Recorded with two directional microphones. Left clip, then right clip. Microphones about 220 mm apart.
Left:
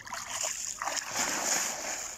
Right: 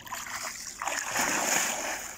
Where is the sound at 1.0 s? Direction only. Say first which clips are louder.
Right 6 dB; 5° left (ahead or behind).